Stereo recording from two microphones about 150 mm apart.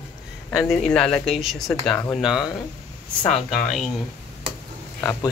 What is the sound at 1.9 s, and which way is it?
Speech, 15° left (ahead or behind).